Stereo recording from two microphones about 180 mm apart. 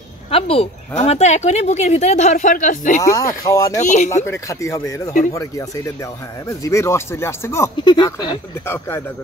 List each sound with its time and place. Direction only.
0.3 s a woman's voice: 30° left (ahead or behind)
3.0 s speech: 20° left (ahead or behind)
3.8 s speech: 40° left (ahead or behind)
4.1 s speech: 15° left (ahead or behind)
8.6 s speech: 10° left (ahead or behind)